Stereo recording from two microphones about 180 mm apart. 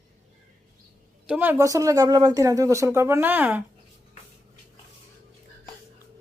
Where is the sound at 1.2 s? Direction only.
5° right (ahead or behind).